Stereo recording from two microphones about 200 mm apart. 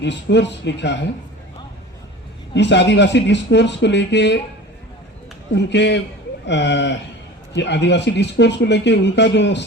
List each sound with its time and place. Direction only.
0.0 s speech: 60° left (ahead or behind)
2.6 s speech: 60° left (ahead or behind)
5.5 s speech: 60° left (ahead or behind)